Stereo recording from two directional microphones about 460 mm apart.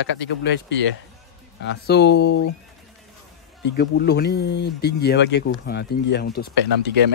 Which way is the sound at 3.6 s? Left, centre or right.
Left.